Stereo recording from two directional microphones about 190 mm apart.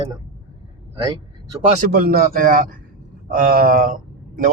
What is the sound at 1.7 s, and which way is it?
A man's voice, 45° right (ahead or behind).